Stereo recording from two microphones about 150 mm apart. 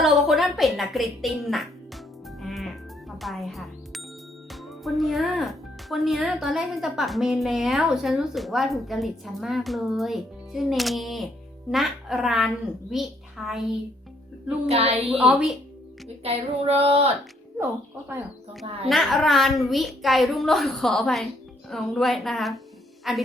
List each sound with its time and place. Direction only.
0.0 s speech: centre (ahead or behind)
2.4 s music: centre (ahead or behind)
3.2 s a child's voice: centre (ahead or behind)
14.7 s female singing: 40° right (ahead or behind)
15.2 s a woman's voice: 10° right (ahead or behind)
16.2 s female singing: 40° right (ahead or behind)
18.6 s female singing: 40° right (ahead or behind)
18.9 s speech: centre (ahead or behind)